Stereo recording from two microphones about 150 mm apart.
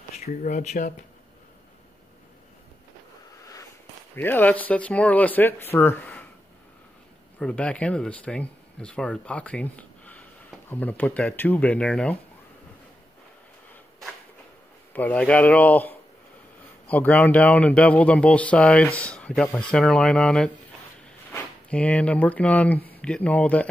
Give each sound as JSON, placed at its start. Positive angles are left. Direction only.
{"t": 0.2, "sound": "speech", "side_deg": 55}
{"t": 4.1, "sound": "speech", "side_deg": 15}
{"t": 7.3, "sound": "speech", "side_deg": 5}
{"t": 14.9, "sound": "speech", "side_deg": 10}